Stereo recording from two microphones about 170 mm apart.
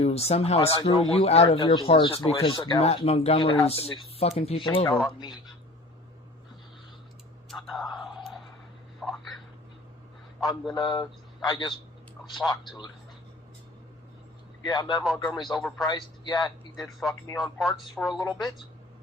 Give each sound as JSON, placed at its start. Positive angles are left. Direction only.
{"t": 0.0, "sound": "speech", "side_deg": 35}
{"t": 2.8, "sound": "speech", "side_deg": 35}
{"t": 7.5, "sound": "whispering", "side_deg": 0}
{"t": 9.0, "sound": "a sound", "side_deg": 0}
{"t": 10.4, "sound": "speech", "side_deg": 0}
{"t": 10.8, "sound": "speech", "side_deg": 25}
{"t": 14.6, "sound": "a man's voice", "side_deg": 25}
{"t": 15.2, "sound": "speech", "side_deg": 5}
{"t": 16.0, "sound": "a man's voice", "side_deg": 25}
{"t": 16.8, "sound": "speech", "side_deg": 0}
{"t": 18.3, "sound": "speech", "side_deg": 25}